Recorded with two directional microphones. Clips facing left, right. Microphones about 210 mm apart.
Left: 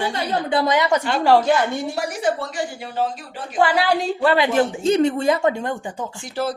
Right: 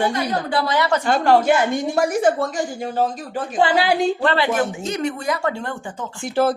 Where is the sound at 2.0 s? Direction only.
50° right (ahead or behind).